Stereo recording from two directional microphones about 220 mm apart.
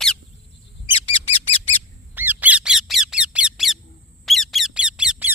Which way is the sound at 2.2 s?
5° right (ahead or behind).